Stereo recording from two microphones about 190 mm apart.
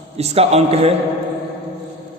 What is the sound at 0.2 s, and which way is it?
Speech, 35° right (ahead or behind).